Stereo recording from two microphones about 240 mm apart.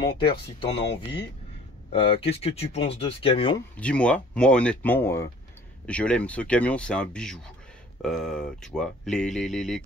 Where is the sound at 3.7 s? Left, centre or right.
Centre.